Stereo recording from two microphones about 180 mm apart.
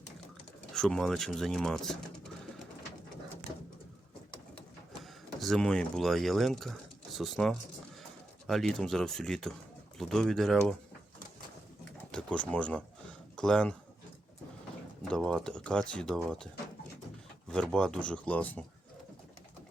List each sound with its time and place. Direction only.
0.7 s speech: 5° left (ahead or behind)
5.4 s speech: 5° left (ahead or behind)
12.1 s speech: 5° left (ahead or behind)
15.1 s speech: 5° left (ahead or behind)
17.5 s speech: 5° left (ahead or behind)